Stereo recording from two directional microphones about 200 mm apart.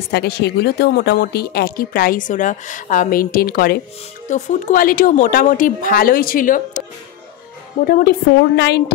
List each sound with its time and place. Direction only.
0.1 s speech: 55° left (ahead or behind)
7.8 s speech: 50° left (ahead or behind)